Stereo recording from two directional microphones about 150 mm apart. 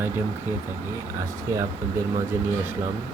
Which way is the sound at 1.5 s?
20° right (ahead or behind).